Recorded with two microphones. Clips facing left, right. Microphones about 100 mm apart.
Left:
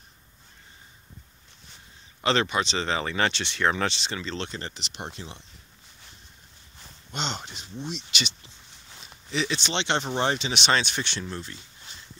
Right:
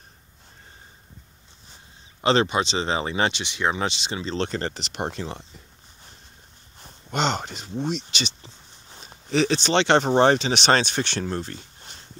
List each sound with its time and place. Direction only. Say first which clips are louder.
2.2 s speech: right 4 dB; 25° right (ahead or behind)
4.5 s speech: right 8 dB; 55° right (ahead or behind)
6.8 s speech: right 8 dB; 50° right (ahead or behind)
8.1 s speech: right 2 dB; 30° right (ahead or behind); by 12.1 s 55° right (ahead or behind)